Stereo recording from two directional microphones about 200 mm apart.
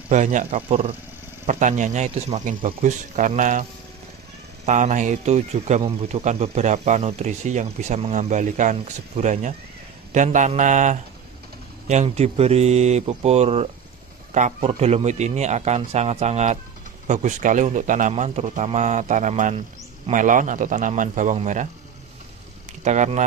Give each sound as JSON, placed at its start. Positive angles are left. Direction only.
{"t": 0.1, "sound": "speech", "side_deg": -35}
{"t": 4.6, "sound": "speech", "side_deg": -35}
{"t": 22.8, "sound": "speech", "side_deg": -35}